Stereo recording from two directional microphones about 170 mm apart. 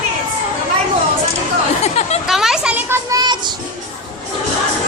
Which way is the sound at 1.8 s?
40° left (ahead or behind).